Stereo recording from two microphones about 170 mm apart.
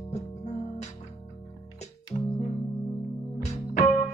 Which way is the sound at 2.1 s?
30° left (ahead or behind).